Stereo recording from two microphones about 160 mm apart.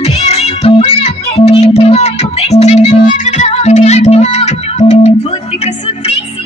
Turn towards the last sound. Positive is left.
turn(degrees=45)  # may be behind; listen again after turning